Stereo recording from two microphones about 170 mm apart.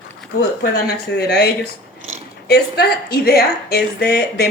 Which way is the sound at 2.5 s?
70° left (ahead or behind).